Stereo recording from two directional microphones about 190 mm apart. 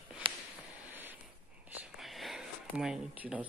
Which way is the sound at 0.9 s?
10° right (ahead or behind).